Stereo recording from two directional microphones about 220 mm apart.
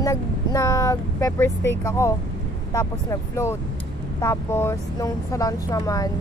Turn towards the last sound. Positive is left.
turn(degrees=15)  # may be behind; listen again after turning